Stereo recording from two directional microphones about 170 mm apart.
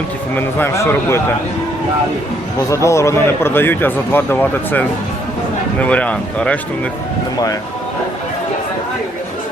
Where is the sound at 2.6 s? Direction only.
20° left (ahead or behind).